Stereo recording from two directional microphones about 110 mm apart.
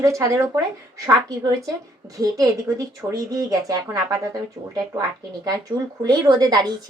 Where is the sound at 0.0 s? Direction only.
30° right (ahead or behind).